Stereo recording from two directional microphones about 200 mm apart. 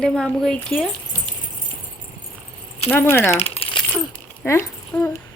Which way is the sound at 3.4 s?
25° left (ahead or behind).